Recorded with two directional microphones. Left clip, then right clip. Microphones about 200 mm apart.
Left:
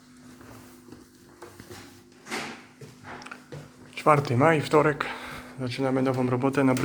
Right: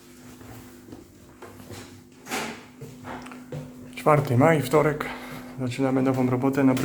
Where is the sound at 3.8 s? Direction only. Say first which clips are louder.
Even; 10° left (ahead or behind).